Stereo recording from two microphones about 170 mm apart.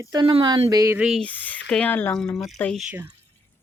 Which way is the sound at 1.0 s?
Centre (ahead or behind).